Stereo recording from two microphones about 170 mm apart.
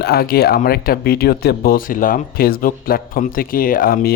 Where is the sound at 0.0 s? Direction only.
65° left (ahead or behind).